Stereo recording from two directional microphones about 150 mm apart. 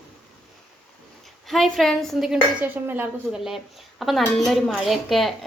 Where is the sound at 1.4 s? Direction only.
Centre (ahead or behind).